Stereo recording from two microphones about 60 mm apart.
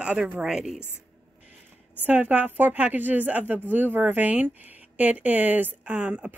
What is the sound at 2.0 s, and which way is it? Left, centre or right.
A woman's voice, right.